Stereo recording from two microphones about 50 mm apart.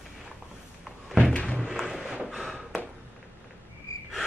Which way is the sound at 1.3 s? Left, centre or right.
Left.